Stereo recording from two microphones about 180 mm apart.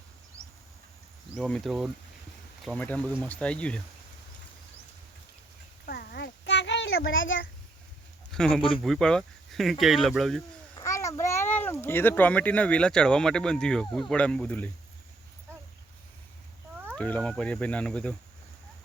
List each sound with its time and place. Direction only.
1.4 s speech: 5° left (ahead or behind)
5.8 s a sound: 60° left (ahead or behind); by 7.4 s 90° left
8.3 s a man's voice: 5° left (ahead or behind)
10.8 s a child's voice: 15° left (ahead or behind)
16.9 s speech: 5° left (ahead or behind)